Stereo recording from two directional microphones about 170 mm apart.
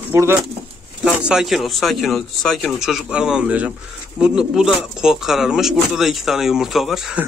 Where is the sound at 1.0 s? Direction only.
5° right (ahead or behind).